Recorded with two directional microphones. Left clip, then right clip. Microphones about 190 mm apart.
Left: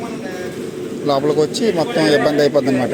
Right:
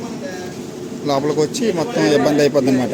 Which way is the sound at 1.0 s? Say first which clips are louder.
Left 2 dB; 10° right (ahead or behind).